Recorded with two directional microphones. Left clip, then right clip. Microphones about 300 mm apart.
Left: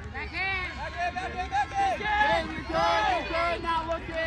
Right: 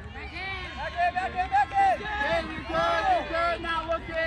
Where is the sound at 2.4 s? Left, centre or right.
Centre.